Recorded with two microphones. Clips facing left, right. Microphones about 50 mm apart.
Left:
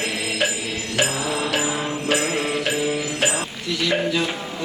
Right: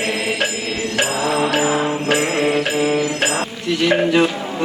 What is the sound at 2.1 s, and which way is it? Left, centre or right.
Music, right.